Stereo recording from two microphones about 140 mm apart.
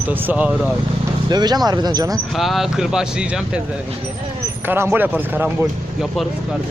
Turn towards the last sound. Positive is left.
turn(degrees=-15)  # may be behind; listen again after turning